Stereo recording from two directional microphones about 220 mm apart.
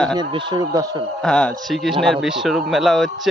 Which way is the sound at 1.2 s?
5° left (ahead or behind).